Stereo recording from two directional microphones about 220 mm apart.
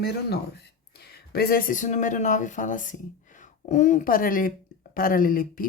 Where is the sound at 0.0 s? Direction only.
50° left (ahead or behind).